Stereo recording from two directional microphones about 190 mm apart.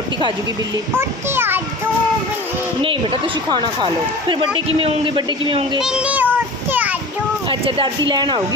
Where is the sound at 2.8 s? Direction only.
30° right (ahead or behind).